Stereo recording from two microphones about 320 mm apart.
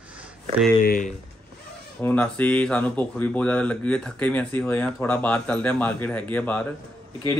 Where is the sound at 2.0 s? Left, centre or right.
Centre.